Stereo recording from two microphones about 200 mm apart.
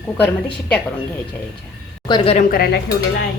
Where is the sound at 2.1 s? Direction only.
30° left (ahead or behind).